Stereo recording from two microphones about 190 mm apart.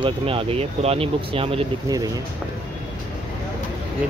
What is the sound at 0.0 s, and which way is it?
Speech, 30° right (ahead or behind).